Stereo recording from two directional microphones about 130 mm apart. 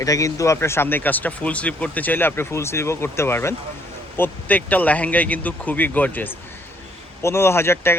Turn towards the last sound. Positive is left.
turn(degrees=20)  # may be behind; listen again after turning